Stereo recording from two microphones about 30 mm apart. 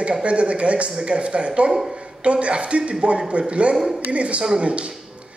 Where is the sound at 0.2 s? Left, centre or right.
Right.